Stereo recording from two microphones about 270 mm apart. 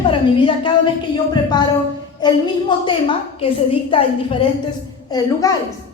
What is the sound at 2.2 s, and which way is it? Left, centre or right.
A woman's voice, centre.